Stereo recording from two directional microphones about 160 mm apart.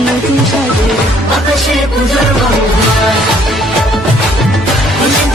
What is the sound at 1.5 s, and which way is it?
Music, centre (ahead or behind).